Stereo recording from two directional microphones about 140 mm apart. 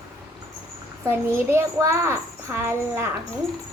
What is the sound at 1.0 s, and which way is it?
A child's voice, 20° right (ahead or behind).